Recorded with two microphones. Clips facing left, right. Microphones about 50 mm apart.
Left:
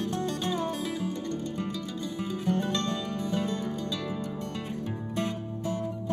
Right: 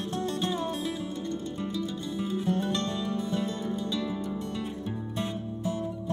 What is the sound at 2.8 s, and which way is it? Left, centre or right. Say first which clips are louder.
Music: even; left.